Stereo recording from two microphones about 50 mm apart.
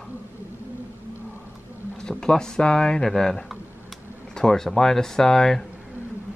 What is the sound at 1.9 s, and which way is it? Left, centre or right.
Speech, centre.